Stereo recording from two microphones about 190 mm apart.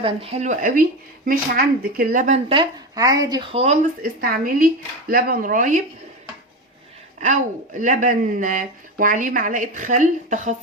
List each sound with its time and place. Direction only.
0.0 s speech: 30° right (ahead or behind)
2.5 s speech: 25° right (ahead or behind)
4.0 s speech: 50° right (ahead or behind)
7.2 s speech: 45° right (ahead or behind)